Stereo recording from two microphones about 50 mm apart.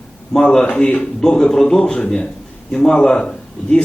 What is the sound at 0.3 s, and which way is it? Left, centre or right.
A man's voice, centre.